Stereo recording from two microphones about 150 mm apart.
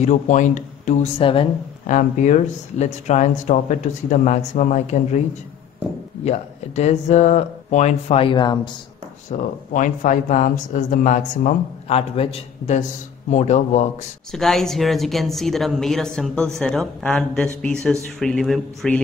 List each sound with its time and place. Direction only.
0.0 s speech: 55° left (ahead or behind)
1.2 s speech: 35° left (ahead or behind)
1.9 s speech: 55° left (ahead or behind)
6.2 s speech: 50° left (ahead or behind); by 8.5 s 30° left (ahead or behind)
9.3 s speech: 55° left (ahead or behind)
14.3 s speech: centre (ahead or behind)